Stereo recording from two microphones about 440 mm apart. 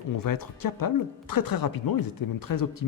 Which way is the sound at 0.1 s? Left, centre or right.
Left.